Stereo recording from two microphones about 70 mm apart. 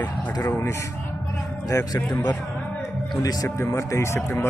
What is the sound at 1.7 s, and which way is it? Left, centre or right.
Speech, left.